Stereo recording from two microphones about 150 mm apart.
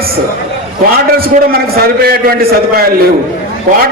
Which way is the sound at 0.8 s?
90° right.